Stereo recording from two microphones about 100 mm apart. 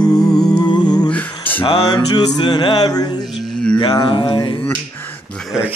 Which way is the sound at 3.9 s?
50° left (ahead or behind).